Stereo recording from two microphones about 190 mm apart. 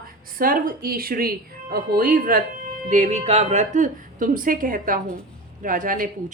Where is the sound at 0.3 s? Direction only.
45° right (ahead or behind).